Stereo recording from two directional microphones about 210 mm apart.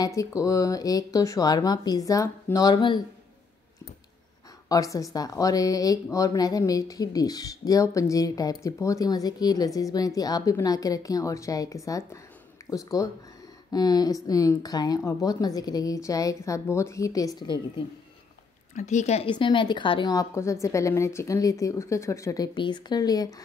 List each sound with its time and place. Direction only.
0.0 s speech: 15° left (ahead or behind)
4.6 s a woman's voice: 15° left (ahead or behind)
18.8 s a woman's voice: 35° left (ahead or behind); by 23.3 s 20° left (ahead or behind)